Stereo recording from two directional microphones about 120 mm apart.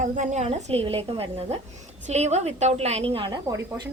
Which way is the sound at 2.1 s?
65° right (ahead or behind).